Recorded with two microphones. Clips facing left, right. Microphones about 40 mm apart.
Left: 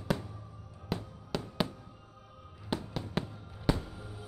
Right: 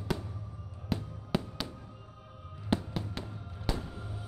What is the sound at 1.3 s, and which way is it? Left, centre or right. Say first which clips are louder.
Fireworks: right 4 dB; centre.